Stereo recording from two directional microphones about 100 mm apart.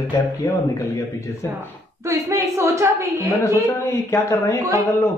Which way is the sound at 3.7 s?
25° left (ahead or behind).